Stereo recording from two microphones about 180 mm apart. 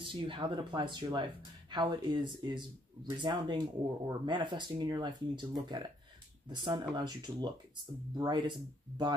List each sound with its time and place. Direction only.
0.0 s speech: 30° right (ahead or behind)